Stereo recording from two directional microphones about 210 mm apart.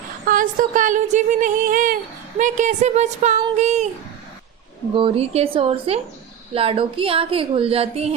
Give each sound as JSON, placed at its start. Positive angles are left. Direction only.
{"t": 0.3, "sound": "speech", "side_deg": -40}
{"t": 4.9, "sound": "speech", "side_deg": -25}